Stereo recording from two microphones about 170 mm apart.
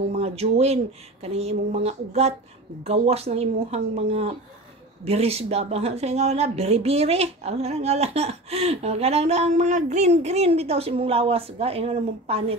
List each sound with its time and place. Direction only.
0.2 s a woman's voice: 35° right (ahead or behind)